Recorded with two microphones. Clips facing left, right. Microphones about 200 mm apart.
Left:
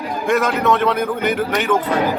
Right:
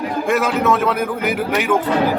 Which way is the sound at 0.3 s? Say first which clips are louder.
Left 1 dB; 5° right (ahead or behind).